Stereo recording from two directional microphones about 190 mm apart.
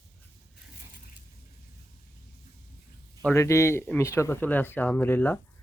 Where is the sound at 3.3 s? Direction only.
15° left (ahead or behind).